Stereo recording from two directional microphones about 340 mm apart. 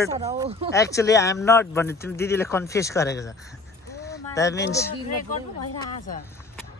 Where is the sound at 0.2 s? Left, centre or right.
Centre.